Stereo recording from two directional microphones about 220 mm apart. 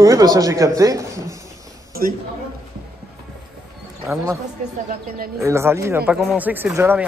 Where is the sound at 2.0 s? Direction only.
40° right (ahead or behind).